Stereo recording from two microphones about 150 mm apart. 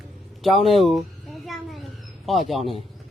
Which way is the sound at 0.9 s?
Centre (ahead or behind).